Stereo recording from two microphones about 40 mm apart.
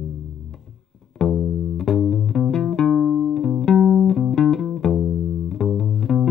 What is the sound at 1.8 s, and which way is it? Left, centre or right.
Music, centre.